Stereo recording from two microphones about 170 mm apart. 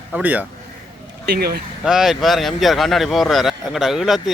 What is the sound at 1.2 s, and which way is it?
Speech, 70° right (ahead or behind).